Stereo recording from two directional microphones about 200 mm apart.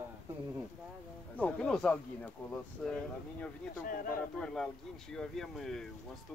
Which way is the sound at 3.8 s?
45° left (ahead or behind).